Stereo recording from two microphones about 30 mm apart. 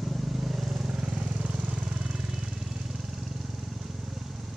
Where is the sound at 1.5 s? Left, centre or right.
Right.